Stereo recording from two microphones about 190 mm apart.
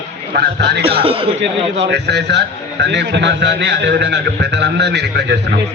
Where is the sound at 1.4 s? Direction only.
70° right (ahead or behind).